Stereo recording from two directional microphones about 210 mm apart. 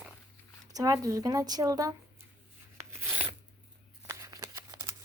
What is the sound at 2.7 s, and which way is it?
Filing, 10° right (ahead or behind).